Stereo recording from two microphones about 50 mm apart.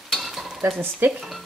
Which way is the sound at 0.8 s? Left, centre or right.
Right.